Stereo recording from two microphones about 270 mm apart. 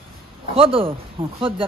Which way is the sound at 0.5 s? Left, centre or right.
Centre.